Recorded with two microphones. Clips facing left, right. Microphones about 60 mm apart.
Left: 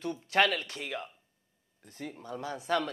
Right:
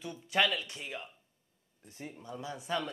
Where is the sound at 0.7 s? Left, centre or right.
Left.